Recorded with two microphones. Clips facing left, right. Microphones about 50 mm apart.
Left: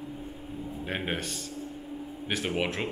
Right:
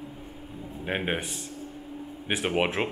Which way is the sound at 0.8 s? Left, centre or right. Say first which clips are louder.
Right 4 dB; centre.